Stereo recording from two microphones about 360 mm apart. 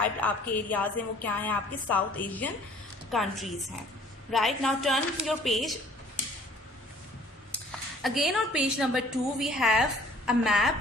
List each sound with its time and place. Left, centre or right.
0.2 s a woman's voice: centre
8.0 s a woman's voice: centre